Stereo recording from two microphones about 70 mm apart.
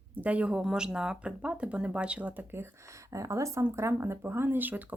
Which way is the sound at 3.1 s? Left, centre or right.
Right.